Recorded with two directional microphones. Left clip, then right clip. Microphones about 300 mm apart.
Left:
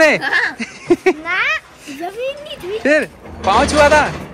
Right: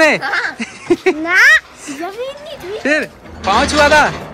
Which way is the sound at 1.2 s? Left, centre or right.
Right.